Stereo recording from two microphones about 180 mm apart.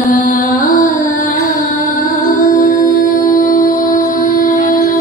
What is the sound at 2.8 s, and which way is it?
Music, 50° left (ahead or behind).